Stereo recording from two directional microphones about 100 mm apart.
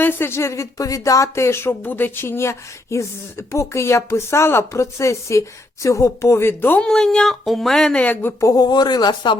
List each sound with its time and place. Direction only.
0.0 s speech: 20° left (ahead or behind)
6.7 s speech: 5° left (ahead or behind)
8.4 s speech: 35° left (ahead or behind)